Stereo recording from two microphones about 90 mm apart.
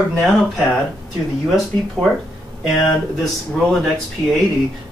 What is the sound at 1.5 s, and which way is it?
Speech, centre (ahead or behind).